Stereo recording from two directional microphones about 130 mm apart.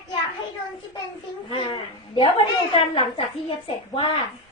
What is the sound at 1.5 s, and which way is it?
A woman's voice, 45° left (ahead or behind).